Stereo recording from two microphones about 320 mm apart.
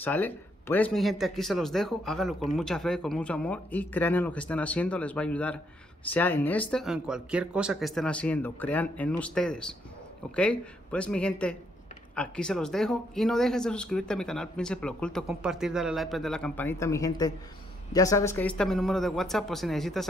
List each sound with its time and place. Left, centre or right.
0.0 s speech: centre